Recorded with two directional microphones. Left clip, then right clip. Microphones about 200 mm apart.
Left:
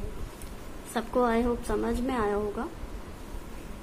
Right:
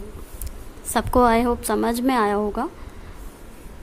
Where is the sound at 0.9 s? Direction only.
50° right (ahead or behind).